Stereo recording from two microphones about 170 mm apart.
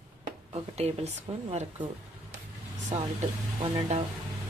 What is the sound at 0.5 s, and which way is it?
Speech, 35° right (ahead or behind).